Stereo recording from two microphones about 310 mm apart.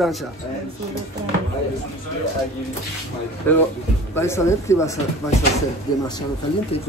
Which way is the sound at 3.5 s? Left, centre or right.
Centre.